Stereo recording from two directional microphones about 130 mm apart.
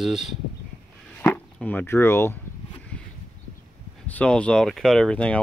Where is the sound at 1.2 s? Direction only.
10° left (ahead or behind).